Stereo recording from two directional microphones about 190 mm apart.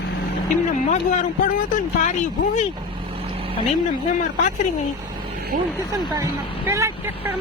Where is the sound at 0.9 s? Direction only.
40° left (ahead or behind).